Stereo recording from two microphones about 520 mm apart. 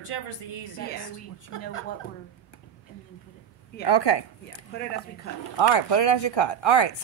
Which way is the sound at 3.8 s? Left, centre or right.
Left.